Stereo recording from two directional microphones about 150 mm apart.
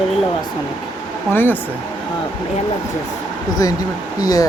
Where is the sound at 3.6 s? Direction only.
25° left (ahead or behind).